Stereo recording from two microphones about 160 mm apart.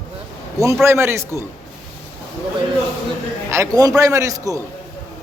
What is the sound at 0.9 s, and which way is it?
Speech, 15° right (ahead or behind).